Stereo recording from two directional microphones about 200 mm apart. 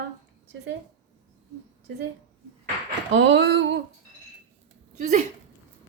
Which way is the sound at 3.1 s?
65° right (ahead or behind).